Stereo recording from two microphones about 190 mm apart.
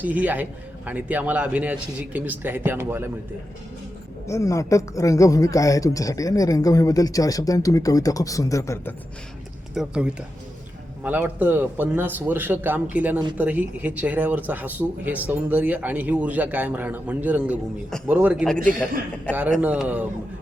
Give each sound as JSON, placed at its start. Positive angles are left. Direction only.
{"t": 0.0, "sound": "speech", "side_deg": -10}
{"t": 4.3, "sound": "speech", "side_deg": 15}
{"t": 9.7, "sound": "a man's voice", "side_deg": -5}
{"t": 18.4, "sound": "a man's voice", "side_deg": 5}
{"t": 19.3, "sound": "speech", "side_deg": -10}